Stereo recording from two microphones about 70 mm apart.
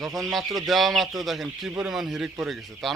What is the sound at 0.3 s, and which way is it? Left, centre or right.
Speech, centre.